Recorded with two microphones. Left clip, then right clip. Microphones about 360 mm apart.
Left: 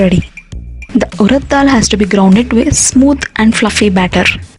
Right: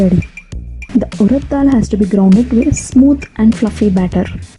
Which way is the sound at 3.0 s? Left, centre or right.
Left.